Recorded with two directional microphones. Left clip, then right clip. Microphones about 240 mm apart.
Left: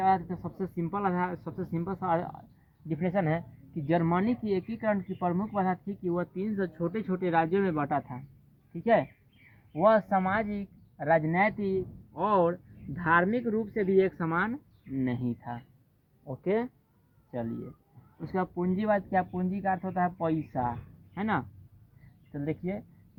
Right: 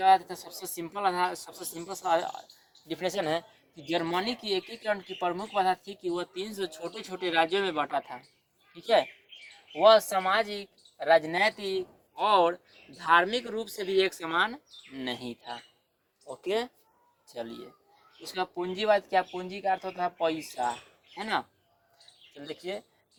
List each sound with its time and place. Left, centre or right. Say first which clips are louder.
0.0 s speech: right 4 dB; right
9.7 s speech: right 3 dB; right
18.3 s speech: even; centre